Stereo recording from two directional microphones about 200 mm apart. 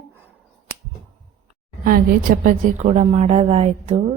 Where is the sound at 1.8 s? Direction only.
45° right (ahead or behind).